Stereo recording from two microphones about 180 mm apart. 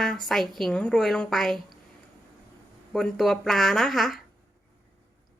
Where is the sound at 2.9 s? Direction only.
Centre (ahead or behind).